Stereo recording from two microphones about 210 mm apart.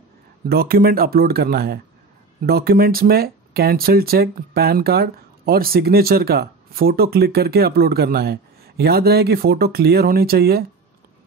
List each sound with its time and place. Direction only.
0.5 s speech: 45° right (ahead or behind)